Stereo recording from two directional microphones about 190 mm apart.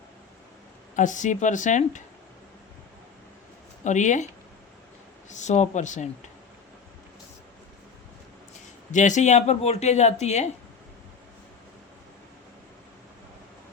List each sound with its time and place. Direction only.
0.9 s speech: 40° left (ahead or behind)
3.8 s speech: 40° left (ahead or behind)
5.3 s speech: 40° left (ahead or behind)
8.9 s speech: 40° left (ahead or behind)